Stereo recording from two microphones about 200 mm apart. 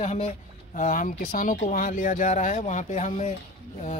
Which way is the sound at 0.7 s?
40° left (ahead or behind).